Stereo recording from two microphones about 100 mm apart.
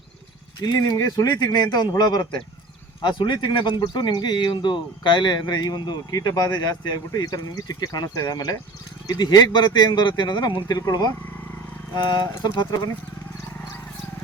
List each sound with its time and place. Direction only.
1.0 s speech: 40° left (ahead or behind)